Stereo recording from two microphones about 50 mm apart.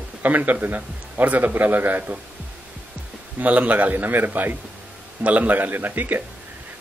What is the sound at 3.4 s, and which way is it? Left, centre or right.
Speech, right.